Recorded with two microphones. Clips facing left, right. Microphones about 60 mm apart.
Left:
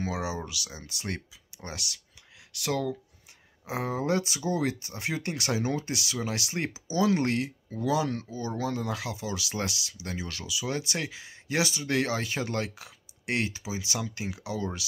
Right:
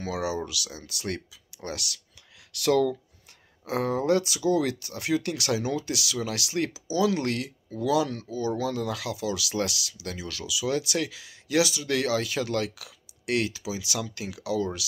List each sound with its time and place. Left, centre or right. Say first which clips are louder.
0.0 s speech: right 3 dB; left
2.5 s speech: right 7 dB; centre; by 14.9 s left